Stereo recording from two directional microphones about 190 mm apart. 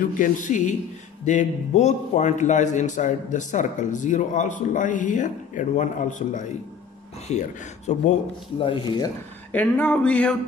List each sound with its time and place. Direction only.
0.2 s a man's voice: 40° left (ahead or behind)
8.5 s speech: 25° left (ahead or behind)
9.5 s a sound: 10° left (ahead or behind)